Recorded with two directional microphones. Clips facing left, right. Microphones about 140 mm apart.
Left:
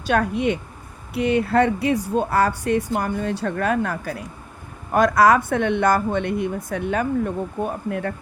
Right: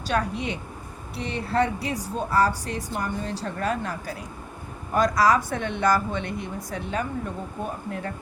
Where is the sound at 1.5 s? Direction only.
55° left (ahead or behind).